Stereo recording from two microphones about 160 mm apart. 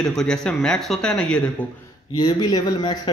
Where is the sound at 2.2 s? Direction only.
25° left (ahead or behind).